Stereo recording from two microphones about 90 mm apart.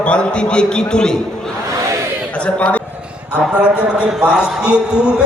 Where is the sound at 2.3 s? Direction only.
15° left (ahead or behind).